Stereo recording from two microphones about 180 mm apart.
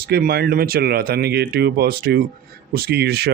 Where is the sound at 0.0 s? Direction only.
60° right (ahead or behind).